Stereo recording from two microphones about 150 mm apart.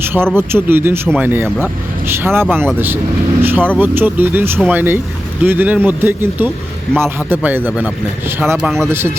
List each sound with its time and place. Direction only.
0.0 s a man's voice: 15° right (ahead or behind)
8.5 s speech: centre (ahead or behind)
8.9 s speech: 15° right (ahead or behind)